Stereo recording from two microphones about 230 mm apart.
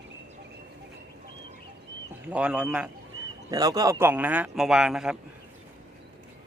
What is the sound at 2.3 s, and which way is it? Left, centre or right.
Speech, centre.